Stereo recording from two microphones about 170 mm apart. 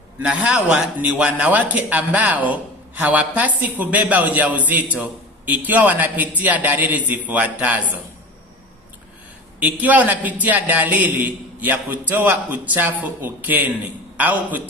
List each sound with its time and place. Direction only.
0.2 s a man's voice: 5° right (ahead or behind)
9.6 s a man's voice: 10° right (ahead or behind)